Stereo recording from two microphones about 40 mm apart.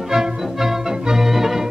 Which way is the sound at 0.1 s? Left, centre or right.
Centre.